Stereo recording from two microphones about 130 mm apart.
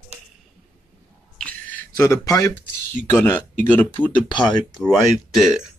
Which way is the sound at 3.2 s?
15° left (ahead or behind).